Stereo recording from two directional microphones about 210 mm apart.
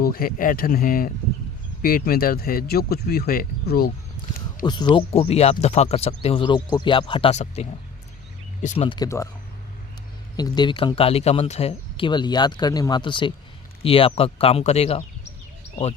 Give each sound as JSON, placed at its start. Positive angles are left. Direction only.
{"t": 0.0, "sound": "speech", "side_deg": 45}
{"t": 4.6, "sound": "speech", "side_deg": 20}
{"t": 9.0, "sound": "speech", "side_deg": 15}
{"t": 10.3, "sound": "speech", "side_deg": 20}